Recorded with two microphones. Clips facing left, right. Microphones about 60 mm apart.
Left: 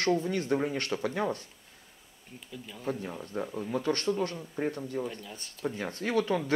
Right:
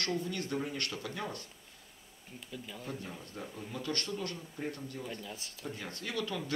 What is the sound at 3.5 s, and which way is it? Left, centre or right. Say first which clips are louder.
Speech: left 9 dB; left.